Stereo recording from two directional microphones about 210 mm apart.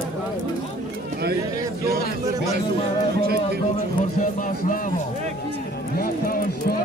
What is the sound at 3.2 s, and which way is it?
Speech, 50° right (ahead or behind).